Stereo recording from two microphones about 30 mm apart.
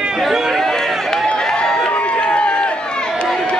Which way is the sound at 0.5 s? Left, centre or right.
Centre.